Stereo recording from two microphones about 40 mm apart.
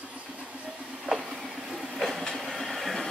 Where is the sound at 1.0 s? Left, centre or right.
Centre.